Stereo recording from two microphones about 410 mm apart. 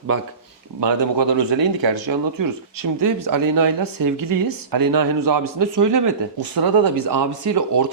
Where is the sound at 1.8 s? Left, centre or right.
Right.